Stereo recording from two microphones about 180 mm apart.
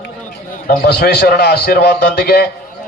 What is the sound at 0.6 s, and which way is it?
A man's voice, 65° left (ahead or behind).